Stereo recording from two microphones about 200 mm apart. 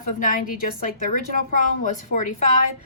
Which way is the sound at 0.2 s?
40° left (ahead or behind).